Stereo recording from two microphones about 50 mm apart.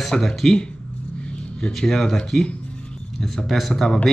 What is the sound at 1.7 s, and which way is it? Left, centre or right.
Speech, centre.